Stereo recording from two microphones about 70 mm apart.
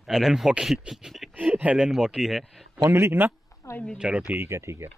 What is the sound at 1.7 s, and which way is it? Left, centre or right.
Speech, centre.